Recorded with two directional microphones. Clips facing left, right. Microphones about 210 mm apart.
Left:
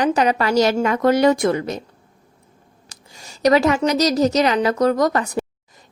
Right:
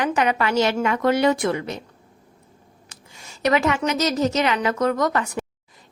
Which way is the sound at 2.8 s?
35° left (ahead or behind).